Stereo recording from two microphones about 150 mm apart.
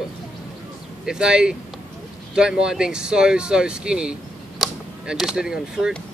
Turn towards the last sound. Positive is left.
turn(degrees=-5)  # may be behind; listen again after turning